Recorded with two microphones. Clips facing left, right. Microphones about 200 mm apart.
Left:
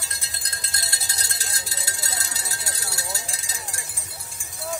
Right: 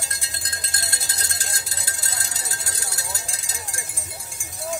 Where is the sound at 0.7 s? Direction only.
50° right (ahead or behind).